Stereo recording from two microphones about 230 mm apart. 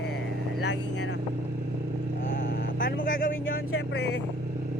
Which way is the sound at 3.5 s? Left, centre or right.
Left.